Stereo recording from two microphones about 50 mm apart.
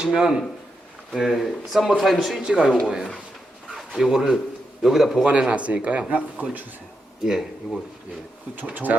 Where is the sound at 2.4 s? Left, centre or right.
Centre.